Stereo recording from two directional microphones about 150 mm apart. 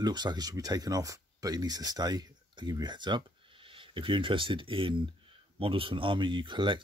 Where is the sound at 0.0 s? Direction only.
30° right (ahead or behind).